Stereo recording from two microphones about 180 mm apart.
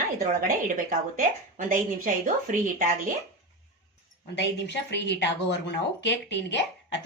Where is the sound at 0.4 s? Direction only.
50° right (ahead or behind).